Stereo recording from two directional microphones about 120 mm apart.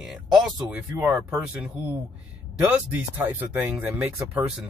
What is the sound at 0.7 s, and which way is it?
Speech, 15° right (ahead or behind).